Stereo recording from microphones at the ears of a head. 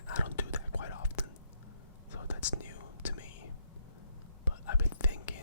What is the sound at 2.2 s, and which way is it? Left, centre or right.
Whispering, left.